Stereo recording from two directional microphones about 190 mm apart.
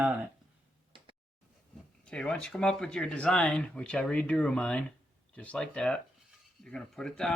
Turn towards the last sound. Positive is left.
turn(degrees=5)  # may be behind; listen again after turning